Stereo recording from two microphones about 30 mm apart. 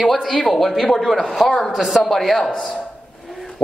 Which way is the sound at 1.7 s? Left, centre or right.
Centre.